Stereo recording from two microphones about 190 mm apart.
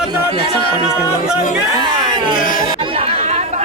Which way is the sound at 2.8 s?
30° right (ahead or behind).